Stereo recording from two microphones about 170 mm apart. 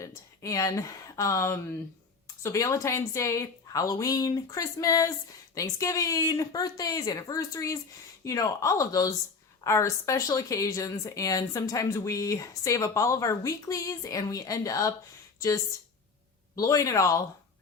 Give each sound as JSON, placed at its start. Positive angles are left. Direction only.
{"t": 0.0, "sound": "speech", "side_deg": 20}